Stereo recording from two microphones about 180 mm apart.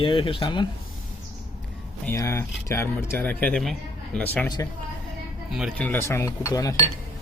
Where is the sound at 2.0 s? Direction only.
15° left (ahead or behind).